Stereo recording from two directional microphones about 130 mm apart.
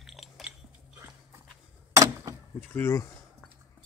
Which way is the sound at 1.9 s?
25° right (ahead or behind).